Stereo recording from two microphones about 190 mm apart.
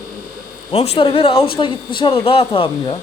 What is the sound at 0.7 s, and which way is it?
Speech, 30° left (ahead or behind).